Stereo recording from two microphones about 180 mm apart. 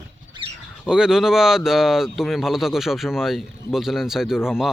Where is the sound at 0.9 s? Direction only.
5° right (ahead or behind).